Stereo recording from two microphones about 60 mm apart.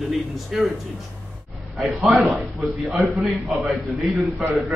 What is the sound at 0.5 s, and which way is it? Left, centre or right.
Speech, centre.